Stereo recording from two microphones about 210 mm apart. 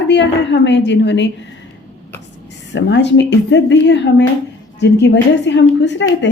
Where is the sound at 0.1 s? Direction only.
55° left (ahead or behind).